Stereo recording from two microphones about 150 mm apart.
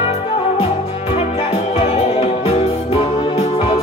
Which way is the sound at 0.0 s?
40° left (ahead or behind).